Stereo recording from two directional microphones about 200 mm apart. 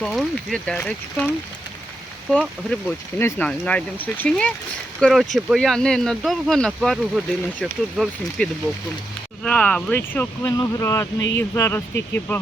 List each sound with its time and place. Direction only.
0.0 s speech: centre (ahead or behind)
2.3 s speech: 5° left (ahead or behind)